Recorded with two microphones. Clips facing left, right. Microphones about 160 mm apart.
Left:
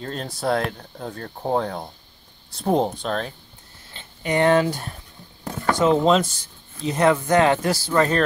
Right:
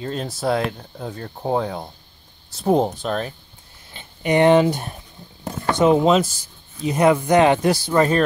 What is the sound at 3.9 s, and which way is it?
Speech, 15° right (ahead or behind).